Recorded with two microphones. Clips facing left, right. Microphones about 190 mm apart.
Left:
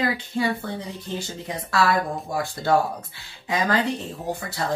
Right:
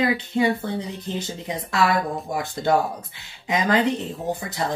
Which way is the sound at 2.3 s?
20° right (ahead or behind).